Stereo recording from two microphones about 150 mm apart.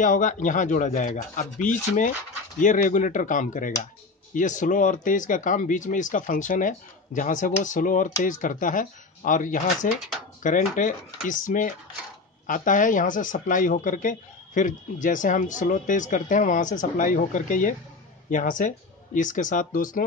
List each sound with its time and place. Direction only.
0.0 s speech: 60° left (ahead or behind)